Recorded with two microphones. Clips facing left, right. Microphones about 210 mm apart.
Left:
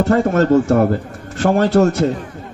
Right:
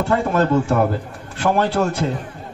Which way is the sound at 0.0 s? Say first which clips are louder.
Left 4 dB; 45° left (ahead or behind).